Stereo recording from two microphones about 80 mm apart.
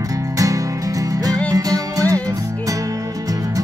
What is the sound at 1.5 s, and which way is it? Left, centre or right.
Music, right.